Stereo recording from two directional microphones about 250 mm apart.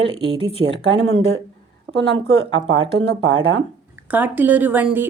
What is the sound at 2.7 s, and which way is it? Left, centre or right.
Speech, right.